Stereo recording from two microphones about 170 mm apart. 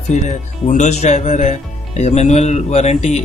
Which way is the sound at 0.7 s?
45° left (ahead or behind).